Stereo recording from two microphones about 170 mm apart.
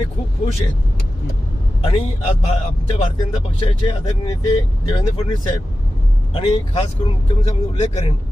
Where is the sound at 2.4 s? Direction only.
35° left (ahead or behind).